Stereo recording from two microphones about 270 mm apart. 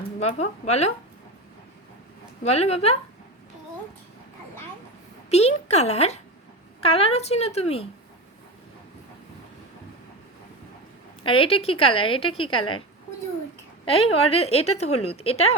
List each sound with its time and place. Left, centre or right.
0.2 s a woman's voice: left
2.4 s a woman's voice: left
5.3 s a woman's voice: left
11.2 s a woman's voice: centre
13.8 s a woman's voice: left